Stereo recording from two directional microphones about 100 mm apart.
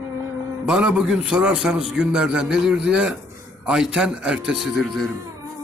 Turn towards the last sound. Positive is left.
turn(degrees=0)  # may be behind; listen again after turning